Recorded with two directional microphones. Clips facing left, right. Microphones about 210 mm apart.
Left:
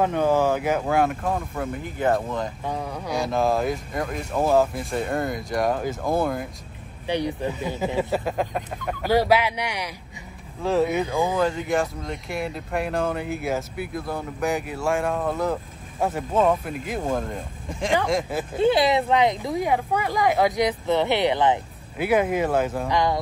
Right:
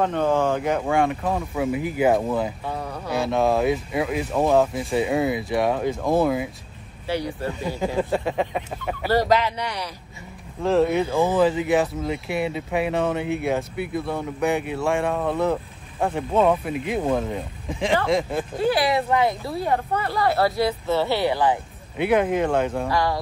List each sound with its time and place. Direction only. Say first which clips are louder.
0.0 s speech: even; 10° left (ahead or behind); by 2.5 s 10° right (ahead or behind)
2.6 s speech: left 1 dB; 10° left (ahead or behind)
3.1 s speech: right 2 dB; centre (ahead or behind)
7.1 s speech: left 1 dB; 20° left (ahead or behind)
7.8 s speech: right 1 dB; 5° left (ahead or behind)
9.1 s speech: even; 10° left (ahead or behind)
10.6 s speech: right 2 dB; centre (ahead or behind)
18.6 s speech: left 2 dB; 20° left (ahead or behind)
21.9 s speech: right 1 dB; 5° left (ahead or behind)
22.8 s speech: even; 20° left (ahead or behind)